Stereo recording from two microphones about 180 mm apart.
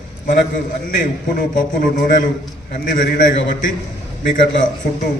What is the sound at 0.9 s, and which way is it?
A man's voice, 50° left (ahead or behind).